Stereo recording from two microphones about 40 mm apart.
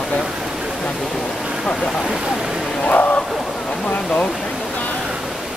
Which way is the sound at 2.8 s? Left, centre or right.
Left.